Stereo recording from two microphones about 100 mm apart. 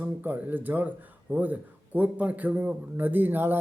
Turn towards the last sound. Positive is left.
turn(degrees=-20)  # may be behind; listen again after turning